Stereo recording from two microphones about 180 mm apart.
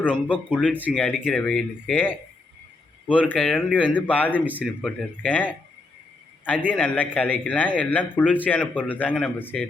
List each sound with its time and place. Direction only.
0.0 s a man's voice: 10° left (ahead or behind)
4.4 s speech: 10° right (ahead or behind)
4.6 s a man's voice: 5° left (ahead or behind)
6.7 s a man's voice: 10° left (ahead or behind)